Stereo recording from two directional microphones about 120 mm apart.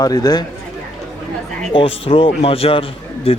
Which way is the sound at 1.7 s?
50° left (ahead or behind).